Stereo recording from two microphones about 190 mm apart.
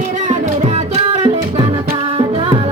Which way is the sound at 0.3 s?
35° right (ahead or behind).